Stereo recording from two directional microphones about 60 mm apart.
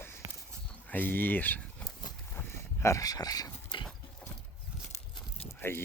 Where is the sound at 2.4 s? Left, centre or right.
Left.